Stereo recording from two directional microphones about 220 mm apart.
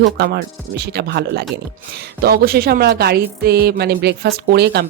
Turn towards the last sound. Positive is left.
turn(degrees=-50)  # may be behind; listen again after turning